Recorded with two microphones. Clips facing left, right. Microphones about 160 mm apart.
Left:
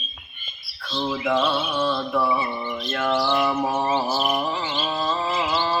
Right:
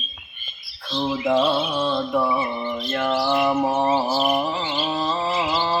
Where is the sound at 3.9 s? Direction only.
10° right (ahead or behind).